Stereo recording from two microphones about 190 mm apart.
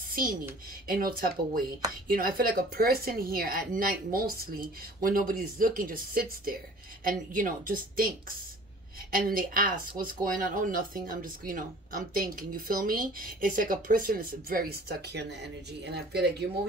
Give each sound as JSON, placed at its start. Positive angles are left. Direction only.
{"t": 0.1, "sound": "speech", "side_deg": -45}